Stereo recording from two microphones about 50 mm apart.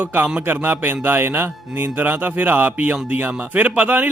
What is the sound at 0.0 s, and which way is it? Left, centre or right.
Speech, right.